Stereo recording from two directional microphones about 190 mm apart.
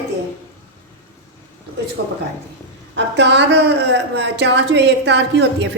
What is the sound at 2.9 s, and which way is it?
A woman's voice, 65° right (ahead or behind).